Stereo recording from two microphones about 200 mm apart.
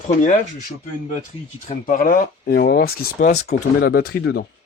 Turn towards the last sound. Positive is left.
turn(degrees=55)  # may be behind; listen again after turning